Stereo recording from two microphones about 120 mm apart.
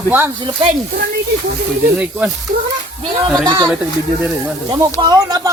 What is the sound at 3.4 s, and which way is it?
Speech, 40° right (ahead or behind).